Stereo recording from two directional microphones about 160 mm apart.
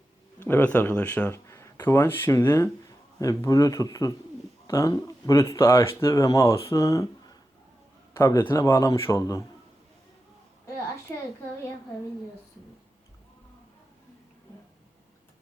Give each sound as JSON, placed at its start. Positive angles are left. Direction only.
{"t": 0.4, "sound": "speech", "side_deg": 10}
{"t": 8.1, "sound": "a man's voice", "side_deg": 15}